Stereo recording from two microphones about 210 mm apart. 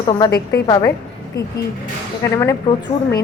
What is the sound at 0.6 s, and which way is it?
Speech, 20° left (ahead or behind).